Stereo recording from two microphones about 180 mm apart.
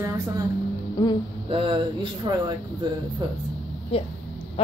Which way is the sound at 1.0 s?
20° left (ahead or behind).